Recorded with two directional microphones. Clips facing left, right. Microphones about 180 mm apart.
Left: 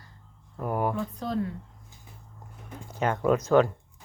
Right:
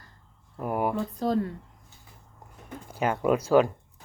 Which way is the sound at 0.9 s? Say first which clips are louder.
Right 4 dB; 40° right (ahead or behind).